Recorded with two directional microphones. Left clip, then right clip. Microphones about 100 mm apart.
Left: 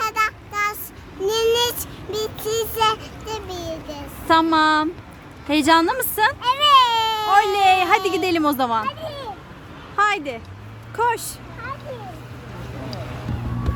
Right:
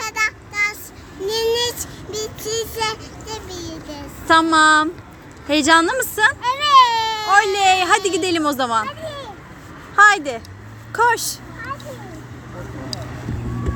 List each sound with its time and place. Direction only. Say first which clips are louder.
0.0 s child singing: even; 45° left (ahead or behind)
1.2 s a sound: left 1 dB; 35° left (ahead or behind)
2.0 s vehicle: left 2 dB; 30° left (ahead or behind)
2.7 s child singing: left 4 dB; 50° left (ahead or behind)
4.5 s a woman's voice: right 4 dB; 15° left (ahead or behind)
6.4 s baby cry: right 1 dB; 45° left (ahead or behind)
7.3 s a woman's voice: right 1 dB; 15° left (ahead or behind)
9.9 s a woman's voice: right 7 dB; 10° right (ahead or behind)